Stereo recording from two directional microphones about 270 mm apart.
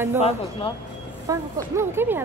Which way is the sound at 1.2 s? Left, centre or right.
Centre.